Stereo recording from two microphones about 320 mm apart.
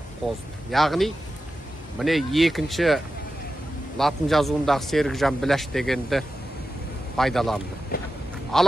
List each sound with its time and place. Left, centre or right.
0.7 s speech: centre
4.0 s speech: centre
7.9 s a sound: left
8.5 s speech: centre